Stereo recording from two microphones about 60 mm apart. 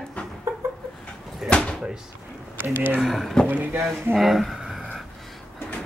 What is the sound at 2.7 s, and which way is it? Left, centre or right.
Speech, right.